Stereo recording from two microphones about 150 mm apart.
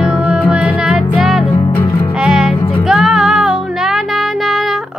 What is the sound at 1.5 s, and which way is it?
Music, 20° left (ahead or behind).